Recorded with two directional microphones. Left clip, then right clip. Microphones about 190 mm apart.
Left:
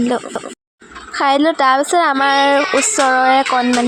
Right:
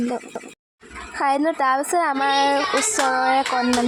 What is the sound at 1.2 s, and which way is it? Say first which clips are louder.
A woman's voice: left 7 dB; 25° left (ahead or behind).